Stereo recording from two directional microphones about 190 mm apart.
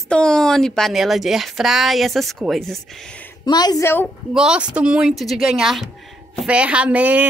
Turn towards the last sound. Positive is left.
turn(degrees=-5)  # may be behind; listen again after turning